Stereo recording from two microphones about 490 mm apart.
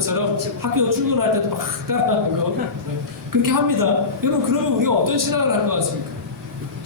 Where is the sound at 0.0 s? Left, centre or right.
Right.